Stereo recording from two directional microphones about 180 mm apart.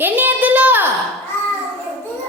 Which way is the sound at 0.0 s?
10° right (ahead or behind).